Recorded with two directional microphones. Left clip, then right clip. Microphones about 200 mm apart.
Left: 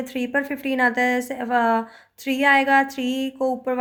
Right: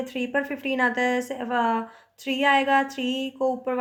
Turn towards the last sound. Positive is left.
turn(degrees=20)  # may be behind; listen again after turning